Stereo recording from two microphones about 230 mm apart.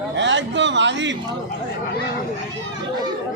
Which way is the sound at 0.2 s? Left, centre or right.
Right.